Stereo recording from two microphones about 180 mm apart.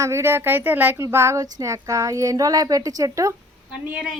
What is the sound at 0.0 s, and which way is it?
Speech, 15° right (ahead or behind).